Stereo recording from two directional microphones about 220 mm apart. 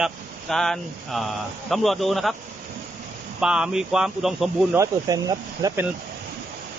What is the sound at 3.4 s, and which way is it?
Speech, 5° right (ahead or behind).